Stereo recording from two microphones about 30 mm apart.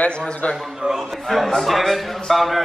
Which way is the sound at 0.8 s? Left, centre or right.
Right.